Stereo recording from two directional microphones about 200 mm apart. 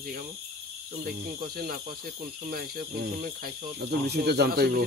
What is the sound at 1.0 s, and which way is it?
Speech, 50° right (ahead or behind).